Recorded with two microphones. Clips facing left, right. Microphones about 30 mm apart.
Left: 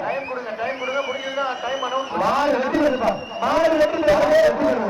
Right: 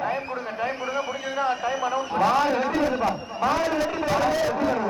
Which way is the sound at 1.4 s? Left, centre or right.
Centre.